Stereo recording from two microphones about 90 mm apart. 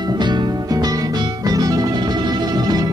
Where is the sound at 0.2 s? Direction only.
55° right (ahead or behind).